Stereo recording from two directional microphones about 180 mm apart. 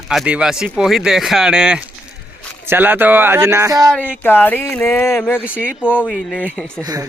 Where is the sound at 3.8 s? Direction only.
5° left (ahead or behind).